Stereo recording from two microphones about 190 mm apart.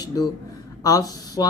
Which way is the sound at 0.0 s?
20° left (ahead or behind).